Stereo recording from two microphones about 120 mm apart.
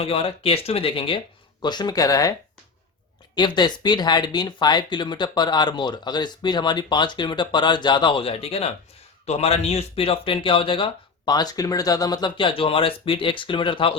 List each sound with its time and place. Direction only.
0.0 s speech: 55° left (ahead or behind)
1.6 s speech: 40° left (ahead or behind)
3.3 s speech: 40° left (ahead or behind)